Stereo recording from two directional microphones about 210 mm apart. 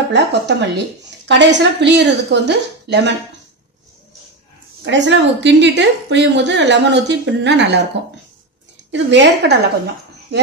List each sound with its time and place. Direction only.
0.1 s a woman's voice: 55° right (ahead or behind)
4.8 s a woman's voice: 60° right (ahead or behind)
8.9 s a woman's voice: 55° right (ahead or behind)